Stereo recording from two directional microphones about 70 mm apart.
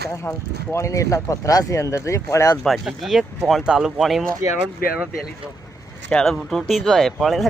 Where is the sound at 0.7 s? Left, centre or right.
Left.